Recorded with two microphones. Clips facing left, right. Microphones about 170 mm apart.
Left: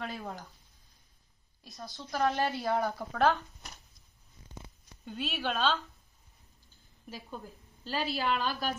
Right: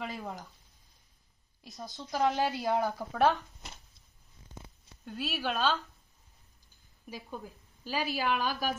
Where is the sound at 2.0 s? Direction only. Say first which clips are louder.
Right 1 dB; 15° right (ahead or behind).